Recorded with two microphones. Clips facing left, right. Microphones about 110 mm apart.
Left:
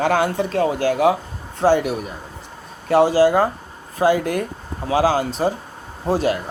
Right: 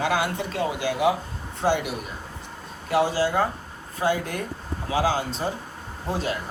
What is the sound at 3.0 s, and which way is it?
Speech, 90° left.